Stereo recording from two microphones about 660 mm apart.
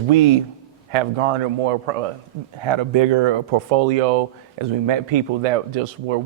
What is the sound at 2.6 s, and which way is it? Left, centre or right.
Speech, right.